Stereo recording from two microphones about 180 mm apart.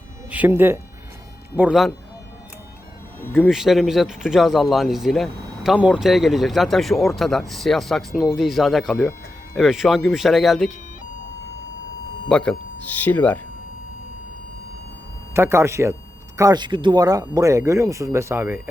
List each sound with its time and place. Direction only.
0.3 s speech: 10° right (ahead or behind)
3.2 s speech: 10° left (ahead or behind)
3.5 s speech: centre (ahead or behind)
12.3 s speech: 5° left (ahead or behind)
15.3 s speech: 15° right (ahead or behind)